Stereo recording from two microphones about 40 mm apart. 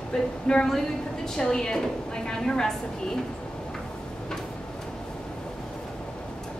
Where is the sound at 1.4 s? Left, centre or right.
Centre.